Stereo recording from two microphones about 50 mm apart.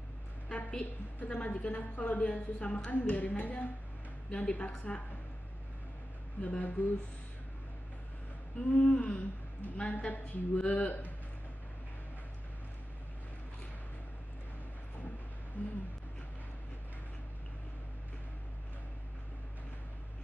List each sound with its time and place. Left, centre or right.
0.5 s a woman's voice: left
6.8 s a woman's voice: left
8.5 s a woman's voice: left
15.6 s a woman's voice: left